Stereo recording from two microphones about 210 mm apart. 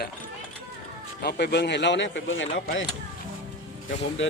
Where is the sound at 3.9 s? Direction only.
65° left (ahead or behind).